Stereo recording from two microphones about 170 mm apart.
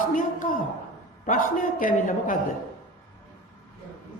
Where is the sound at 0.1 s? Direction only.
50° left (ahead or behind).